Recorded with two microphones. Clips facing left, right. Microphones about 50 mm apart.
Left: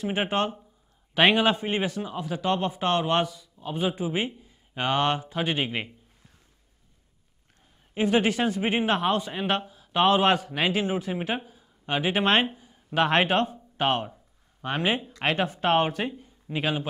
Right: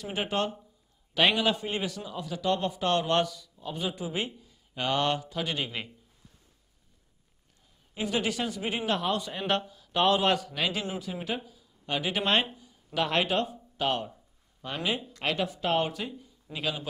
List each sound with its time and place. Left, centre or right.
0.0 s a man's voice: left
7.9 s speech: left
9.4 s a man's voice: centre; by 16.8 s left